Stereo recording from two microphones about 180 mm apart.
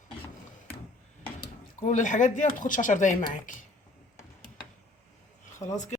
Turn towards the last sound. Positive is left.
turn(degrees=20)  # may be behind; listen again after turning